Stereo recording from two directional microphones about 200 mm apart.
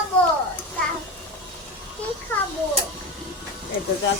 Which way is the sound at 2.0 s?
5° left (ahead or behind).